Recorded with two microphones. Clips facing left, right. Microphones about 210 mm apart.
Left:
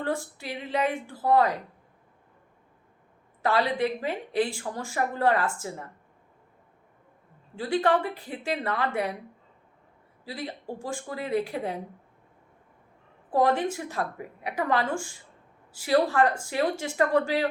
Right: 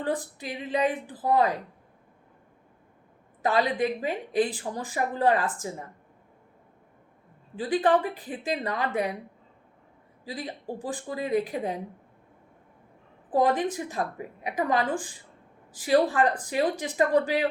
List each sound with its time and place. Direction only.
0.0 s a woman's voice: 20° right (ahead or behind)
3.4 s a woman's voice: 15° right (ahead or behind)
7.5 s a woman's voice: 20° right (ahead or behind)
10.2 s a woman's voice: 20° right (ahead or behind)
13.3 s a woman's voice: 20° right (ahead or behind)